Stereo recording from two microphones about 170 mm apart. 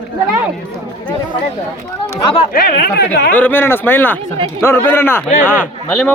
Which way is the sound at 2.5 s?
65° left (ahead or behind).